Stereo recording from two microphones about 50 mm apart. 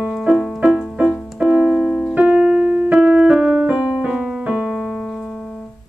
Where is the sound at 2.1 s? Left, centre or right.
Right.